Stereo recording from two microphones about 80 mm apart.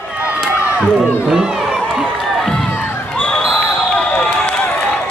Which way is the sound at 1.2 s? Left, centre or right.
Centre.